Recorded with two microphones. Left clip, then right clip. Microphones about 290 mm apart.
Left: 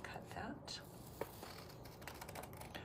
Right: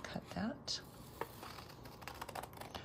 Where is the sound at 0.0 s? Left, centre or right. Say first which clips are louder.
Right 4 dB; right.